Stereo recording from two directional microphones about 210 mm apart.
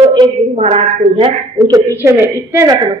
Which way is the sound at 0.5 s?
30° right (ahead or behind).